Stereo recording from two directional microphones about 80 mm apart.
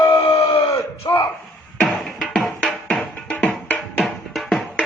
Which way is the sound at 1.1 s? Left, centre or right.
Left.